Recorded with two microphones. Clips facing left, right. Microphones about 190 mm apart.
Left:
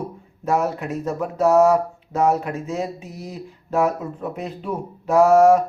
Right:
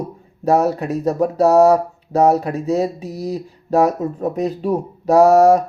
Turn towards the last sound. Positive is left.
turn(degrees=-40)  # may be behind; listen again after turning